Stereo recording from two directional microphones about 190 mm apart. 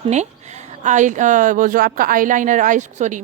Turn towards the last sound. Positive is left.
turn(degrees=-40)  # may be behind; listen again after turning